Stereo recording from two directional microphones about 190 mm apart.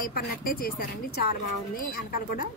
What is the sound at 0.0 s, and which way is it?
Speech, 50° left (ahead or behind).